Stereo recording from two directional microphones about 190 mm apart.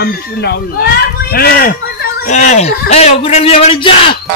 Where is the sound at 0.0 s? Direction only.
60° left (ahead or behind).